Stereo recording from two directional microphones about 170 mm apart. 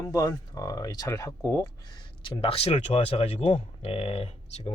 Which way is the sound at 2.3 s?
35° left (ahead or behind).